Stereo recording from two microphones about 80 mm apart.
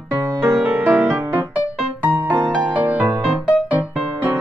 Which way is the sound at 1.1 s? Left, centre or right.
Right.